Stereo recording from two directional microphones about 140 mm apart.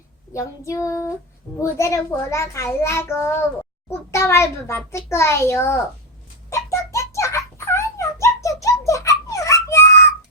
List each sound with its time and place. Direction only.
0.3 s a child's voice: 20° left (ahead or behind)
6.5 s a sound: 20° left (ahead or behind)
8.9 s giggle: 20° left (ahead or behind)